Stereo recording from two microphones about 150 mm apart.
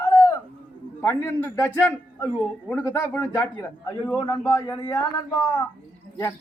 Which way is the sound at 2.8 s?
20° left (ahead or behind).